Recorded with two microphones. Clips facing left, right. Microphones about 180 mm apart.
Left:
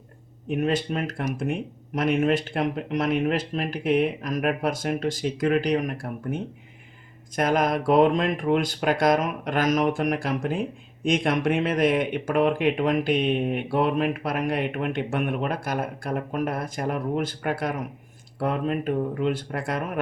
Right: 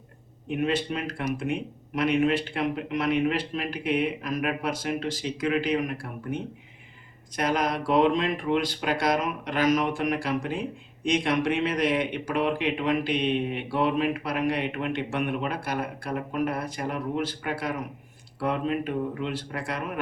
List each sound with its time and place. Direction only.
0.5 s speech: 45° left (ahead or behind)